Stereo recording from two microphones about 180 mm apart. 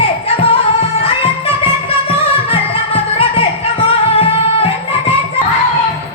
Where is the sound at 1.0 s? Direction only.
30° left (ahead or behind).